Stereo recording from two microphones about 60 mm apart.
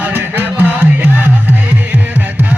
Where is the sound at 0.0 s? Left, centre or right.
Right.